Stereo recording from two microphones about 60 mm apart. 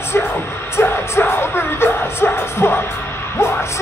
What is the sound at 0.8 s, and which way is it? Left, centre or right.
Music, left.